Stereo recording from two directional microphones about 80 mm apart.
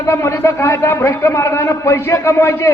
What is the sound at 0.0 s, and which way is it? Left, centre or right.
A man's voice, left.